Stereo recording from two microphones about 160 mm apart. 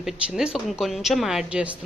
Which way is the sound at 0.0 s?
Centre (ahead or behind).